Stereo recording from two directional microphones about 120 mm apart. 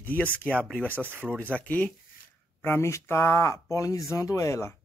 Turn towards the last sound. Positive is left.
turn(degrees=25)  # may be behind; listen again after turning